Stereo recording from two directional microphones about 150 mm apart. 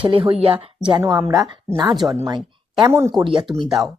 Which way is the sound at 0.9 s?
25° right (ahead or behind).